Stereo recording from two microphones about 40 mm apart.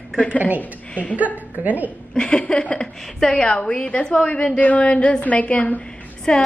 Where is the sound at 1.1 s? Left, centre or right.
Right.